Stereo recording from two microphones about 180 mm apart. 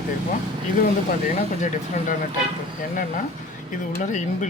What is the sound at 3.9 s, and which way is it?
Speech, 45° left (ahead or behind).